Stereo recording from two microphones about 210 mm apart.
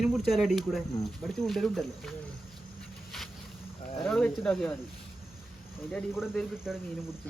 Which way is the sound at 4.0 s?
5° left (ahead or behind).